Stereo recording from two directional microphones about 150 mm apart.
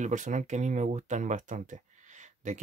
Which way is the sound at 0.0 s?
55° right (ahead or behind).